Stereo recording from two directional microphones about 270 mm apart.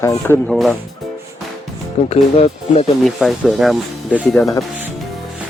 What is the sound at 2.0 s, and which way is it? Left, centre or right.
Speech, left.